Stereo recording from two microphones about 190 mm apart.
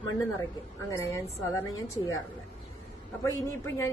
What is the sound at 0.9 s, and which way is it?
A woman's voice, 15° left (ahead or behind).